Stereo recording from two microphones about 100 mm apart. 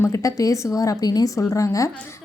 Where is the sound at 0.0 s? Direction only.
30° left (ahead or behind).